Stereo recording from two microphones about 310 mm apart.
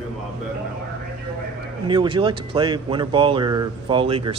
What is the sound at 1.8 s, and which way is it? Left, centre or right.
Speech, centre.